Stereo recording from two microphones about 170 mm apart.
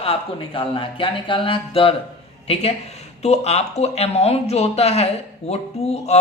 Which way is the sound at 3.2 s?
40° left (ahead or behind).